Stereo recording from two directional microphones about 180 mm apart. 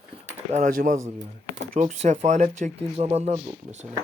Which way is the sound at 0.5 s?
50° right (ahead or behind).